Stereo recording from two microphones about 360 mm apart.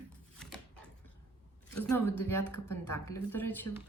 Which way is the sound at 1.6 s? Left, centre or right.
Centre.